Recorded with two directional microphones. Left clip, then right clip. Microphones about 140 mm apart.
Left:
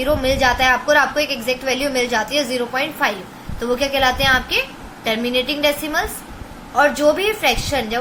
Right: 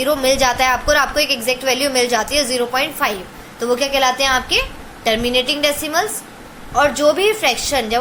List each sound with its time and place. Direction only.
0.0 s a woman's voice: 30° right (ahead or behind)